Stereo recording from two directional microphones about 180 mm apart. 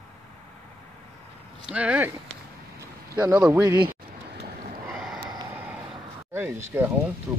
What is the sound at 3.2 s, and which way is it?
Speech, 10° right (ahead or behind).